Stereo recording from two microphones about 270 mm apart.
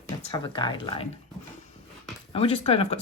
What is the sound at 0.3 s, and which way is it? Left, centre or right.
Speech, centre.